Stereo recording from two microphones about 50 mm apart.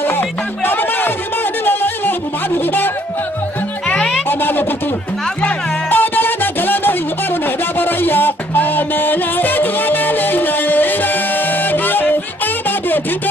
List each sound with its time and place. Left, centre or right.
0.0 s music: left
3.9 s music: left
4.3 s music: left
5.9 s music: left